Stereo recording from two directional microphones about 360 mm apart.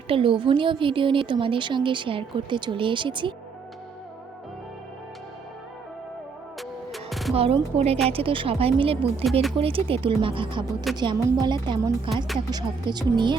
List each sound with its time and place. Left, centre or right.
0.1 s a woman's voice: centre
6.6 s music: centre
7.3 s a woman's voice: centre